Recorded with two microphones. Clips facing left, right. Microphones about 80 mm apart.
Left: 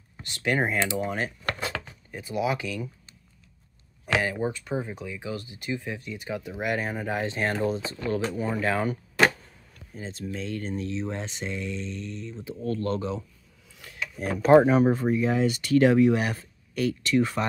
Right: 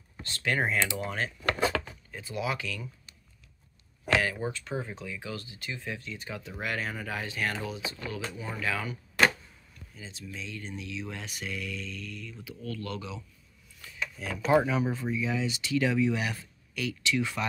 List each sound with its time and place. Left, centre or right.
0.2 s speech: centre
4.2 s speech: left
7.6 s speech: left
10.7 s speech: left